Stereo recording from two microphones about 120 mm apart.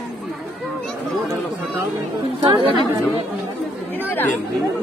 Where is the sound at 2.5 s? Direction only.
45° right (ahead or behind).